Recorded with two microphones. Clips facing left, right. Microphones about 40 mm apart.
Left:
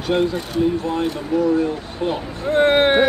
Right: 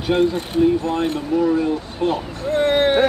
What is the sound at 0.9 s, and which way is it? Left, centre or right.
Speech, right.